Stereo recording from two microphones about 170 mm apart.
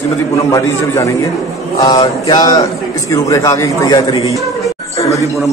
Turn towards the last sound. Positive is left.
turn(degrees=20)  # may be behind; listen again after turning